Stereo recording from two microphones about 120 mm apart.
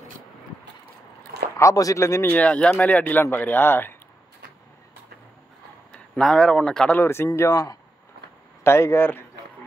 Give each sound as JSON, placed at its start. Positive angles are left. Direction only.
{"t": 1.6, "sound": "speech", "side_deg": 30}
{"t": 2.2, "sound": "speech", "side_deg": 10}
{"t": 5.9, "sound": "speech", "side_deg": 5}
{"t": 7.0, "sound": "speech", "side_deg": 20}